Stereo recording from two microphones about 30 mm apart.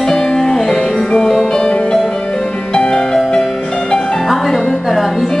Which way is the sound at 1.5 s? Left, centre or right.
Left.